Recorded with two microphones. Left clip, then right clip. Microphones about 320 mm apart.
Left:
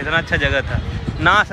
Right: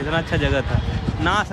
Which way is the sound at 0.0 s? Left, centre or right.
Centre.